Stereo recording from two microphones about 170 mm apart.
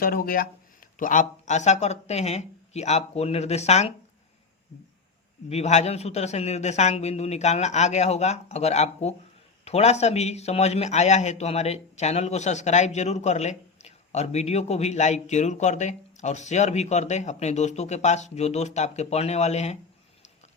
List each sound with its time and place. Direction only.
0.0 s speech: 60° left (ahead or behind); by 3.9 s 40° left (ahead or behind)
5.5 s speech: 40° left (ahead or behind)